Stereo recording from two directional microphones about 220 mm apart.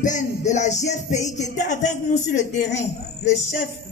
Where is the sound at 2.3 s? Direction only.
35° left (ahead or behind).